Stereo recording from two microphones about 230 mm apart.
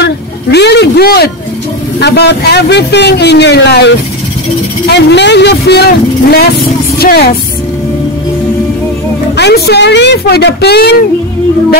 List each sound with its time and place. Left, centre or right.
0.0 s speech: left
7.0 s music: left
9.4 s speech: left